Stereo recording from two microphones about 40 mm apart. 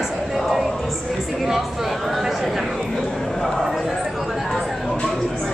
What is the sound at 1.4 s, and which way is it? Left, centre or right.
Speech, centre.